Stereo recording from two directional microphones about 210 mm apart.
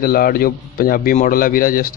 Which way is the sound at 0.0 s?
45° left (ahead or behind).